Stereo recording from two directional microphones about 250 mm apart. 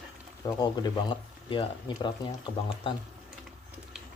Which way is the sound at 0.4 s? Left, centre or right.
Centre.